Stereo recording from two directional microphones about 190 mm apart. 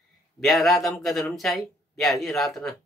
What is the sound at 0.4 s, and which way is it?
A man's voice, centre (ahead or behind).